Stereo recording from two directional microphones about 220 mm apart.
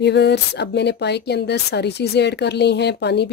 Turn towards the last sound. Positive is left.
turn(degrees=50)  # may be behind; listen again after turning